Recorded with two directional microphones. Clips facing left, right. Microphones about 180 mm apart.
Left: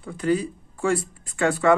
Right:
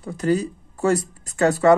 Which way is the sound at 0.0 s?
40° right (ahead or behind).